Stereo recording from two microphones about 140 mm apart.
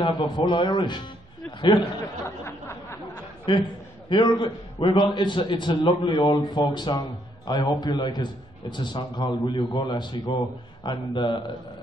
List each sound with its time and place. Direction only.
0.0 s a man's voice: 35° left (ahead or behind)
2.2 s a sound: 20° left (ahead or behind)
3.5 s a man's voice: 35° left (ahead or behind)